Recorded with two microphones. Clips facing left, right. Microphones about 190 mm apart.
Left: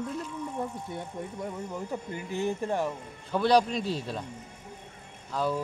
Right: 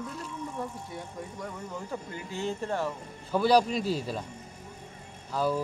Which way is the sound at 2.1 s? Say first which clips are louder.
Left 4 dB; 15° left (ahead or behind).